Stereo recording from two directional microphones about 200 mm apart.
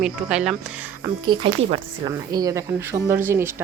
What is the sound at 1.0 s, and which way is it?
Speech, 20° right (ahead or behind).